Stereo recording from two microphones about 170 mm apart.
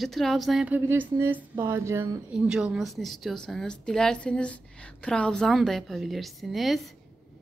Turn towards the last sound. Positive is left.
turn(degrees=0)  # may be behind; listen again after turning